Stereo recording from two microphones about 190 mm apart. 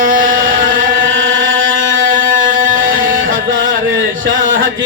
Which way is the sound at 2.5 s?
45° right (ahead or behind).